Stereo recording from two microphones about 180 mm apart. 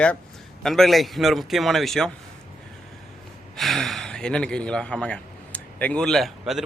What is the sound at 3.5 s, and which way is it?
A man's voice, centre (ahead or behind).